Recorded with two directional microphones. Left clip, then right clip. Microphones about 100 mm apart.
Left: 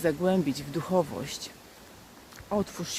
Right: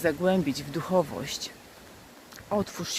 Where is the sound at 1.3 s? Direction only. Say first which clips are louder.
Right 3 dB; 35° left (ahead or behind).